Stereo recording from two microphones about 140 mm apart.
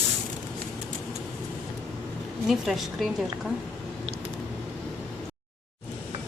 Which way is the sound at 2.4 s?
Centre (ahead or behind).